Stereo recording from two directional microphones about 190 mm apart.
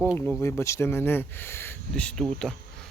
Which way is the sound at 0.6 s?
15° left (ahead or behind).